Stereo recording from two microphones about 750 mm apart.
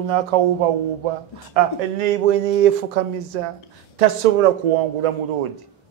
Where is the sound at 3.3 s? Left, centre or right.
Right.